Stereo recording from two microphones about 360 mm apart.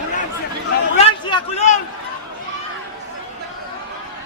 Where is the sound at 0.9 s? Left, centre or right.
Centre.